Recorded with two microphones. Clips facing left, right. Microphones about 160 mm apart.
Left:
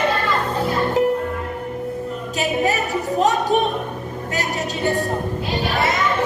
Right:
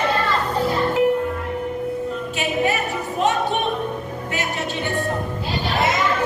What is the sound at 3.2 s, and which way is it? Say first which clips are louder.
Music: left 1 dB; 40° left (ahead or behind).